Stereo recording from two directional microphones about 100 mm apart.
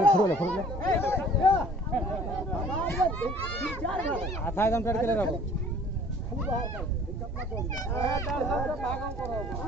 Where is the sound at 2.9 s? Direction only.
20° left (ahead or behind).